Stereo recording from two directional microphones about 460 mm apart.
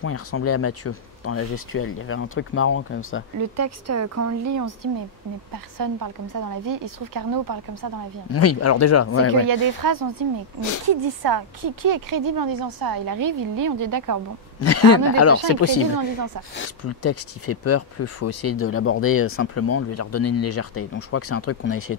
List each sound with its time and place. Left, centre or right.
0.0 s speech: left
3.3 s speech: right
8.3 s speech: left
9.3 s speech: right
14.6 s speech: left